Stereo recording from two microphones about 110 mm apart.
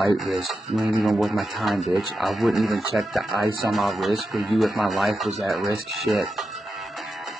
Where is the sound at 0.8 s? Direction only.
30° right (ahead or behind).